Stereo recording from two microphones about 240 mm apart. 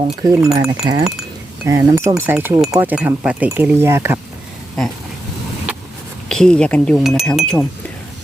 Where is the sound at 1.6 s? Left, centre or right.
Centre.